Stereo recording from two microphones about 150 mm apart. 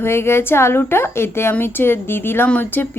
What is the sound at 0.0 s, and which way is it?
A woman's voice, 15° left (ahead or behind).